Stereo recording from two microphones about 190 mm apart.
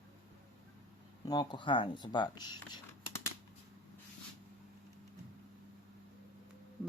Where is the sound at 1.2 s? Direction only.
25° left (ahead or behind).